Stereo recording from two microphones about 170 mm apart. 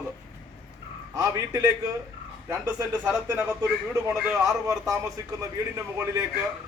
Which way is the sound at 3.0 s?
10° right (ahead or behind).